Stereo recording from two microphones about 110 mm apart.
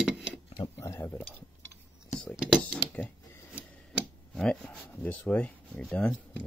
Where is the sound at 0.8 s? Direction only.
25° left (ahead or behind).